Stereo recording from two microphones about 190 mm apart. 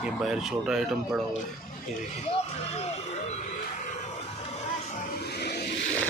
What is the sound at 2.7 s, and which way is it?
Music, 35° left (ahead or behind).